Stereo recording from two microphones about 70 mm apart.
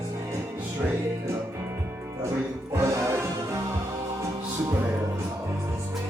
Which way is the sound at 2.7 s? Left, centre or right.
Right.